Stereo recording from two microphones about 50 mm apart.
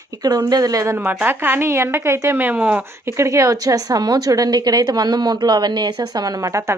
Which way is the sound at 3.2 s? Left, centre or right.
Right.